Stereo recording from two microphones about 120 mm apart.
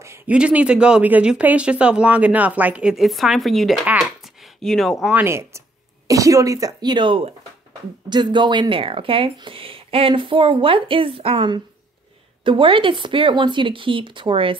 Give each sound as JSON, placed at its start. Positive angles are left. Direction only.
{"t": 0.0, "sound": "a sound", "side_deg": -25}
{"t": 0.3, "sound": "speech", "side_deg": -10}
{"t": 3.8, "sound": "speech", "side_deg": -10}
{"t": 4.4, "sound": "speech", "side_deg": 5}
{"t": 5.1, "sound": "speech", "side_deg": -20}